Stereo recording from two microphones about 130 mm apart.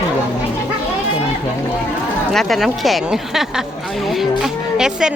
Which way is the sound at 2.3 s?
Centre (ahead or behind).